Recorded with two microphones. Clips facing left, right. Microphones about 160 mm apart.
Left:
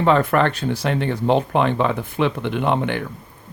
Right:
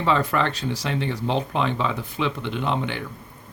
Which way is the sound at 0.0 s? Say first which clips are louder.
Left 5 dB; 55° left (ahead or behind).